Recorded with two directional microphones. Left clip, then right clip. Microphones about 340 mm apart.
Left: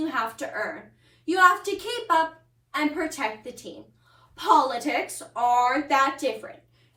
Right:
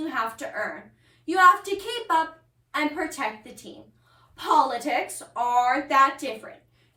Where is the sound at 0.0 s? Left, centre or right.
Centre.